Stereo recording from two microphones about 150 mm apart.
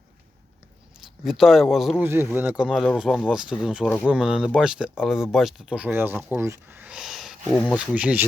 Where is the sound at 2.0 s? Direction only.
15° right (ahead or behind).